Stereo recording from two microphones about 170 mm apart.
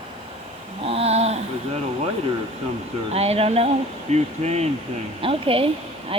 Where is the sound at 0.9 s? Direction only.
35° right (ahead or behind).